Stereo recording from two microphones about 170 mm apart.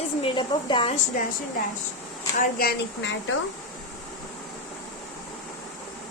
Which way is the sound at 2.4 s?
60° left (ahead or behind).